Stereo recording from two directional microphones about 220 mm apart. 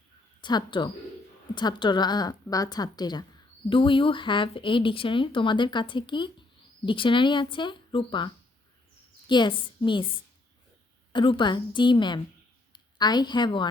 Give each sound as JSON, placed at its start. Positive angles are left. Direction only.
{"t": 0.4, "sound": "a woman's voice", "side_deg": 20}
{"t": 11.1, "sound": "a woman's voice", "side_deg": 20}